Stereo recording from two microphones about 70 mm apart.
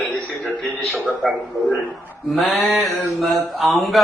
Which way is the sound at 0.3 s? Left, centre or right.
Centre.